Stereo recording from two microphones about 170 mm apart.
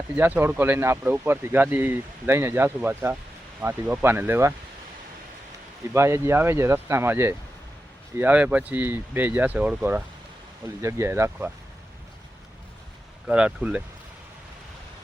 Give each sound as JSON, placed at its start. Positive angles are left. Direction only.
{"t": 0.2, "sound": "speech", "side_deg": -10}
{"t": 5.9, "sound": "speech", "side_deg": -15}
{"t": 13.2, "sound": "speech", "side_deg": -5}